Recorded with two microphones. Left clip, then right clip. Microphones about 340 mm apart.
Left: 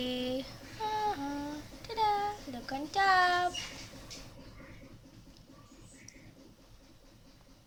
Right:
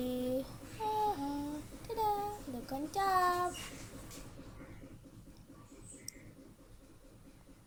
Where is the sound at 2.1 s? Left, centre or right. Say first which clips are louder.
Left 4 dB; left.